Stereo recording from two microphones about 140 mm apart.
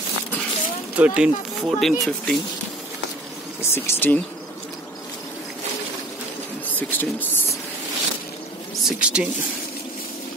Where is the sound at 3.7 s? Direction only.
15° left (ahead or behind).